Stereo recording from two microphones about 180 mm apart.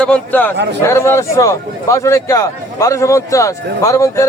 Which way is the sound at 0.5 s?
70° right (ahead or behind).